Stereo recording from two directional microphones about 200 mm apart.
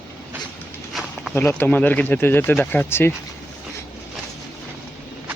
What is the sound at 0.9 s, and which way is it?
Walk, centre (ahead or behind).